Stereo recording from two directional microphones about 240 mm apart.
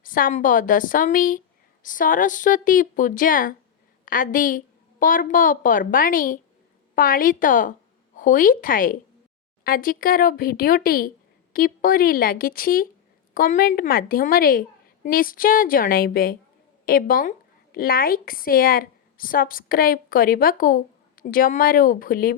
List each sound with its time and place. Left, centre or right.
0.0 s a woman's voice: left